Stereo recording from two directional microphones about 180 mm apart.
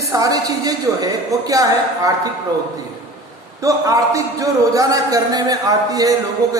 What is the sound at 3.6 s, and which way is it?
A man's voice, 20° right (ahead or behind).